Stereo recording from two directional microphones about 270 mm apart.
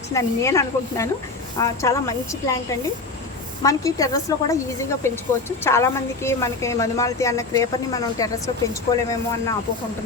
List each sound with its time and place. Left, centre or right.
0.1 s a woman's voice: centre
3.6 s a woman's voice: centre
8.9 s speech: left